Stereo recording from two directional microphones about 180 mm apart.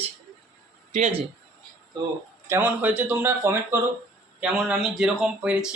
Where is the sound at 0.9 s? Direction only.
40° right (ahead or behind).